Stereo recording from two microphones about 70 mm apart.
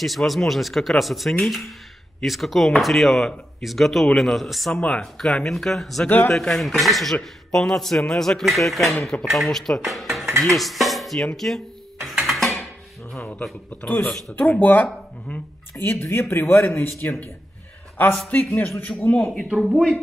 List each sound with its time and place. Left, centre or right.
0.0 s speech: centre
6.0 s speech: left
6.3 s a man's voice: centre
10.4 s music: centre
11.3 s speech: centre
12.1 s a sound: centre
13.2 s a man's voice: centre
15.8 s speech: left
18.3 s speech: left